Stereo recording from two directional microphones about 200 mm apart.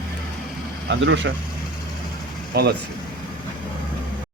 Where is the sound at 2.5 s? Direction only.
50° right (ahead or behind).